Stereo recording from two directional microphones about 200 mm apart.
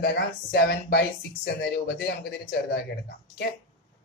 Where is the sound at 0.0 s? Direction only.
55° left (ahead or behind).